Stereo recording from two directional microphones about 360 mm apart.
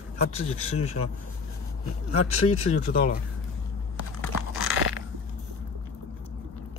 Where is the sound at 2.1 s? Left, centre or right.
Left.